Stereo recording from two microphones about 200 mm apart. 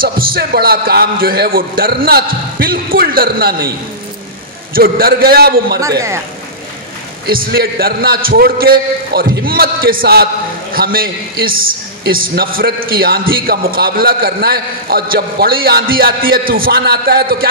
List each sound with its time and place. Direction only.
0.0 s a man's voice: 45° right (ahead or behind)
4.7 s a man's voice: 45° right (ahead or behind)
5.8 s speech: 15° right (ahead or behind)
7.2 s a man's voice: 50° right (ahead or behind)